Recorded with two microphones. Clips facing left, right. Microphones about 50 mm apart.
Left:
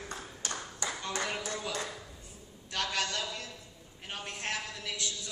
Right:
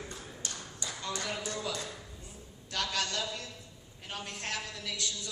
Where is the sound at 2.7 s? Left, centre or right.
Left.